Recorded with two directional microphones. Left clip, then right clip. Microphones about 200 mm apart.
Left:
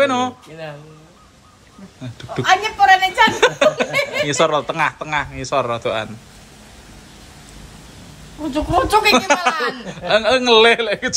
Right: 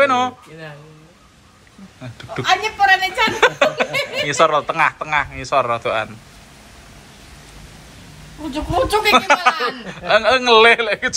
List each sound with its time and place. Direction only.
0.0 s a woman's voice: 15° left (ahead or behind)
2.1 s a woman's voice: 10° left (ahead or behind)
8.5 s a woman's voice: 5° left (ahead or behind)